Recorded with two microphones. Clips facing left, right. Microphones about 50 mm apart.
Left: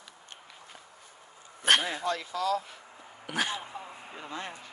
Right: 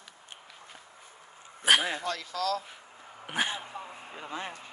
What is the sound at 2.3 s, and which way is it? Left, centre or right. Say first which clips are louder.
Speech: left 1 dB; centre.